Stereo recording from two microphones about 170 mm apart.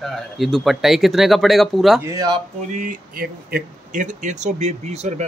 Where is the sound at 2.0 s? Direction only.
20° right (ahead or behind).